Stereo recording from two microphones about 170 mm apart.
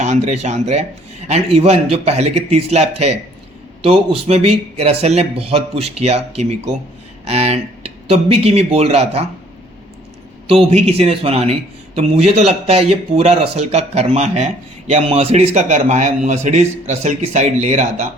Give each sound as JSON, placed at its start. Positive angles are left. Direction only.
{"t": 0.0, "sound": "speech", "side_deg": -45}
{"t": 10.4, "sound": "speech", "side_deg": -35}